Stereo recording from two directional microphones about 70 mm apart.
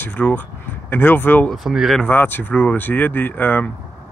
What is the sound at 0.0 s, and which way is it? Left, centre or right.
Speech, left.